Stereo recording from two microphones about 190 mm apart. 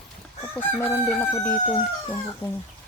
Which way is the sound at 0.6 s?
10° left (ahead or behind).